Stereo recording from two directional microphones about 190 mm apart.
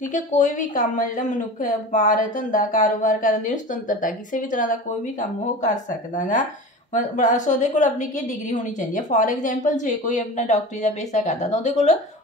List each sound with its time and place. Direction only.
0.1 s a woman's voice: 40° left (ahead or behind)